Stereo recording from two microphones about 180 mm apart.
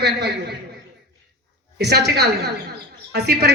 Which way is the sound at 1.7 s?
65° right (ahead or behind).